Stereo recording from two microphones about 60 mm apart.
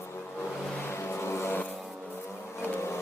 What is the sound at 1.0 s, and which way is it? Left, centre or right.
Vehicle, left.